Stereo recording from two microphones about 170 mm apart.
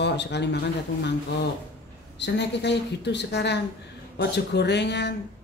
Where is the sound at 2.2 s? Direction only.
90° left.